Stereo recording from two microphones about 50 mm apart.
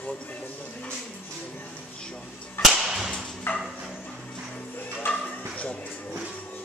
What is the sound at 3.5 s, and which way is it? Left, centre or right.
Dog, left.